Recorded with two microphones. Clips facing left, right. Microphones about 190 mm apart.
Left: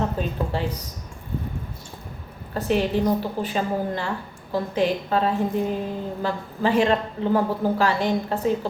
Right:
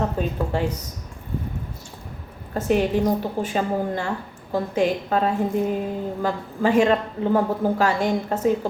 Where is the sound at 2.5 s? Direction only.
45° right (ahead or behind).